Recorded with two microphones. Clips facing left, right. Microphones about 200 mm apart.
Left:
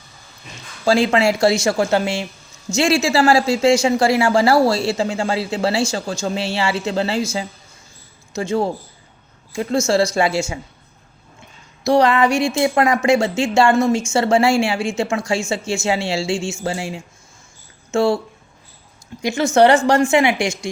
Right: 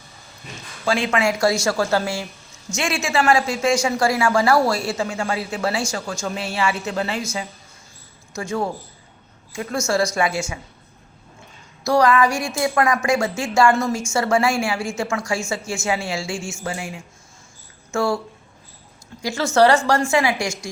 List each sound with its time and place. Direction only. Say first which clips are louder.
0.9 s speech: left 5 dB; 35° left (ahead or behind)
8.4 s speech: left 5 dB; 25° left (ahead or behind)
11.8 s speech: left 2 dB; 25° left (ahead or behind)
19.2 s speech: left 3 dB; 20° left (ahead or behind)